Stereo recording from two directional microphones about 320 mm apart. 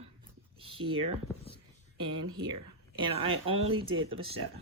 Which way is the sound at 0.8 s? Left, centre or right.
Right.